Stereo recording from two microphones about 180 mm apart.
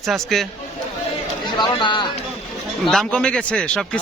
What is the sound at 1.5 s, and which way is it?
Speech, 25° left (ahead or behind).